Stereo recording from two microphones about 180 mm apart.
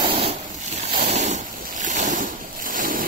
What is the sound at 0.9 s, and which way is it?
Boat, 40° right (ahead or behind).